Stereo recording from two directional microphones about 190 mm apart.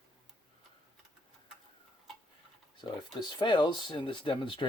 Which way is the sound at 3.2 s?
25° left (ahead or behind).